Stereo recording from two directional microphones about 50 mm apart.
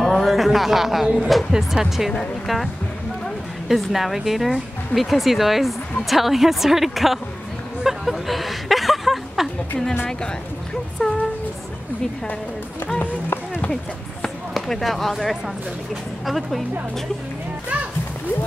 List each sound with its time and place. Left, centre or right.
0.0 s speech: centre
7.8 s a sound: centre
10.0 s speech: centre
13.0 s speech: left
14.7 s speech: centre